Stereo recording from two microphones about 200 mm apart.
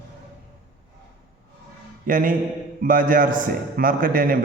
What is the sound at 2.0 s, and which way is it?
A man's voice, 40° right (ahead or behind).